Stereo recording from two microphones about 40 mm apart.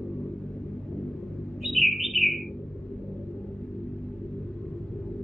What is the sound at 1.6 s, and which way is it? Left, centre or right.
Bird, centre.